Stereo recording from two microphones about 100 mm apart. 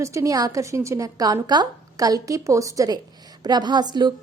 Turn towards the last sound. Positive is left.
turn(degrees=-45)  # may be behind; listen again after turning